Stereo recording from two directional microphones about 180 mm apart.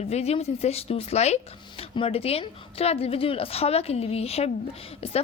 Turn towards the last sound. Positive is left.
turn(degrees=35)  # may be behind; listen again after turning